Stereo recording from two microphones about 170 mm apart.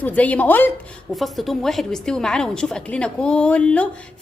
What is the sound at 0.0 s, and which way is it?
Speech, 10° left (ahead or behind).